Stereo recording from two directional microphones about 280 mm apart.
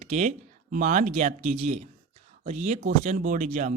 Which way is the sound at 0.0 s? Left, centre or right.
Right.